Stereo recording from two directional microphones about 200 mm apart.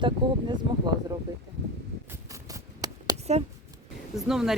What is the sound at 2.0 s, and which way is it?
Writing, 15° right (ahead or behind).